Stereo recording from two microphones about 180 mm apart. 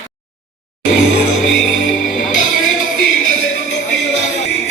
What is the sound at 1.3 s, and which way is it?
Music, 90° left.